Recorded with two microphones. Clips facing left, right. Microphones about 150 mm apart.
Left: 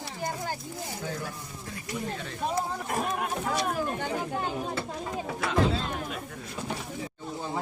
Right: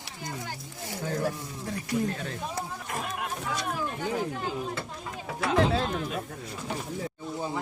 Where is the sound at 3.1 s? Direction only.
45° left (ahead or behind).